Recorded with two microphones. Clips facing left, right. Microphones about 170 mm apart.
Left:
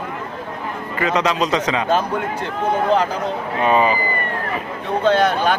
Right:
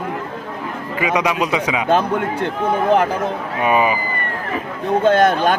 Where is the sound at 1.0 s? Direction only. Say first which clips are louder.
Even; 10° right (ahead or behind).